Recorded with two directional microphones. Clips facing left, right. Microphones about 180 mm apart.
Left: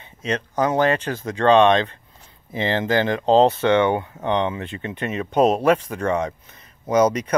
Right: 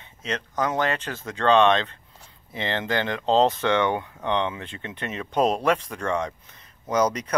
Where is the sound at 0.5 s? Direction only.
35° left (ahead or behind).